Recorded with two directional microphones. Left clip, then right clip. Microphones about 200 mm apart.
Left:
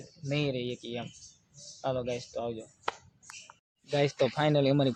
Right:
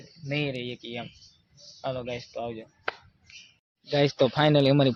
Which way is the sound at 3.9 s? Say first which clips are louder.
Right 4 dB; 20° right (ahead or behind).